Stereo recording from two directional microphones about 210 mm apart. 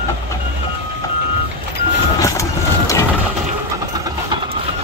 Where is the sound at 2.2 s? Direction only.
15° left (ahead or behind).